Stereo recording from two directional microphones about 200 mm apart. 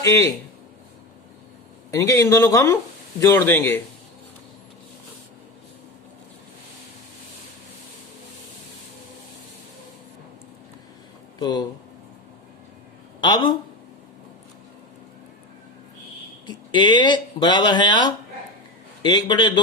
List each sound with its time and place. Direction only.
0.0 s speech: 15° left (ahead or behind)
1.9 s speech: 15° left (ahead or behind)
11.3 s speech: 20° left (ahead or behind)
13.2 s speech: 20° left (ahead or behind)
16.5 s speech: 20° left (ahead or behind)